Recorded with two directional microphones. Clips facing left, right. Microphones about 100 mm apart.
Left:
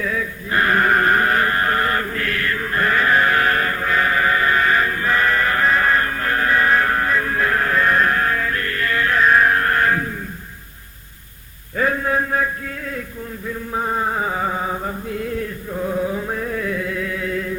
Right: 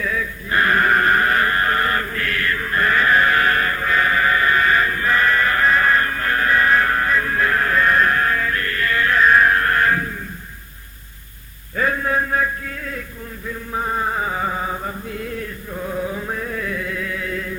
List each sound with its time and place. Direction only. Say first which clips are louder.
0.0 s chant: left 1 dB; 20° left (ahead or behind)
11.8 s a sound: left 1 dB; 20° left (ahead or behind)
13.7 s music: left 1 dB; 20° left (ahead or behind)
15.8 s chant: left 3 dB; 20° left (ahead or behind)